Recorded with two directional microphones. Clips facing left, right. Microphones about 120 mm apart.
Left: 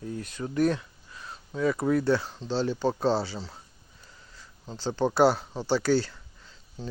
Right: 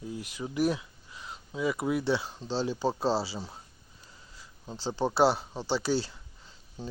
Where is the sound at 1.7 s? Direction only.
10° right (ahead or behind).